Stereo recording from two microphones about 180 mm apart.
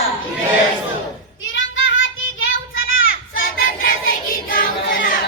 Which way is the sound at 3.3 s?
55° left (ahead or behind).